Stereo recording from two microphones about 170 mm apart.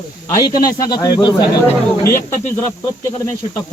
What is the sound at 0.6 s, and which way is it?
Speech, 20° left (ahead or behind).